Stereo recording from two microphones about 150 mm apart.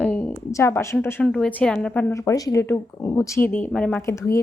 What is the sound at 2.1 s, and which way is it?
A woman's voice, 20° left (ahead or behind).